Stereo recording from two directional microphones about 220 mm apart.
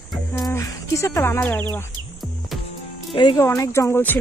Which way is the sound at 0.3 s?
10° left (ahead or behind).